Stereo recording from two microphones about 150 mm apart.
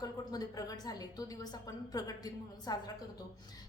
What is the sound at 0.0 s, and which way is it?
A woman's voice, 25° left (ahead or behind).